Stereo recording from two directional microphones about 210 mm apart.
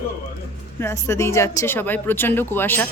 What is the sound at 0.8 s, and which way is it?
Speech, 15° left (ahead or behind).